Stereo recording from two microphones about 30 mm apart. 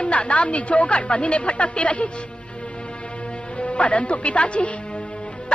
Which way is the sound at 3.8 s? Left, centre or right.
Left.